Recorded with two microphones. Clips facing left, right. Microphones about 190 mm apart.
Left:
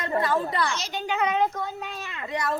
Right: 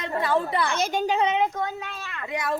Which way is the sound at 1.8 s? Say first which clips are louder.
Left 1 dB; 15° left (ahead or behind).